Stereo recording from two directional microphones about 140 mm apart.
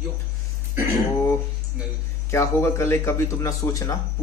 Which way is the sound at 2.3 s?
20° left (ahead or behind).